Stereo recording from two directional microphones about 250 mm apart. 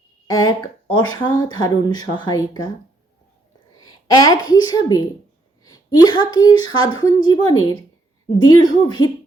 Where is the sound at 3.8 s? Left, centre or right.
Centre.